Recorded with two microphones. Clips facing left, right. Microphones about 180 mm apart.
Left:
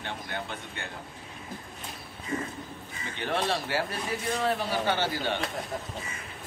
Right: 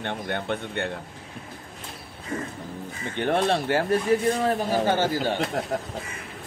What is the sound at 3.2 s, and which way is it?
Speech, 55° right (ahead or behind).